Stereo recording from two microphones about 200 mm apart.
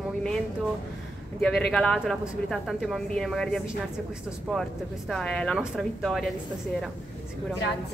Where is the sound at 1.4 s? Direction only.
Centre (ahead or behind).